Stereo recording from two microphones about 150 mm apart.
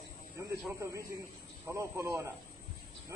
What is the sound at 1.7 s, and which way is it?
Speech, 20° right (ahead or behind).